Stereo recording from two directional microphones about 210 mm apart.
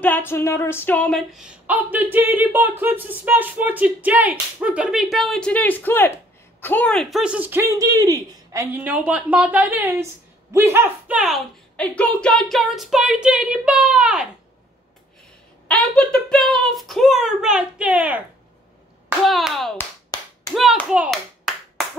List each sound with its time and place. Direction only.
0.0 s speech: 10° left (ahead or behind)
15.7 s speech: 5° left (ahead or behind)
20.1 s clapping: 20° left (ahead or behind)
20.5 s clapping: centre (ahead or behind)